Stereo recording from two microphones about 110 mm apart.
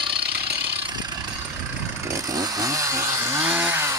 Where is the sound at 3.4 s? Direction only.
10° right (ahead or behind).